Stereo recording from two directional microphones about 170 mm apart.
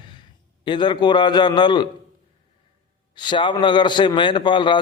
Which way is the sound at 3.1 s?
25° left (ahead or behind).